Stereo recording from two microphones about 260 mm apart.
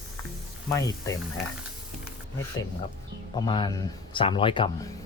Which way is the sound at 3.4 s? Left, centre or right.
Centre.